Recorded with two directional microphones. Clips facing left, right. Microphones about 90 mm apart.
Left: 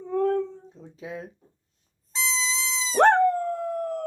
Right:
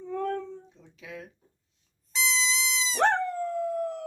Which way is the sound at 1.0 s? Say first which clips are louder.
Left 6 dB; 30° left (ahead or behind).